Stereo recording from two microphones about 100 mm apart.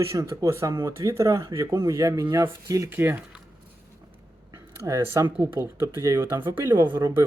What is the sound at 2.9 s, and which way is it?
Speech, 20° right (ahead or behind).